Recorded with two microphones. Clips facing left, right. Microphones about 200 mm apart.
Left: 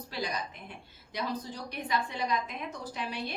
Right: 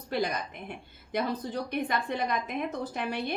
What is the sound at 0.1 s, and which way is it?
A woman's voice, 55° right (ahead or behind).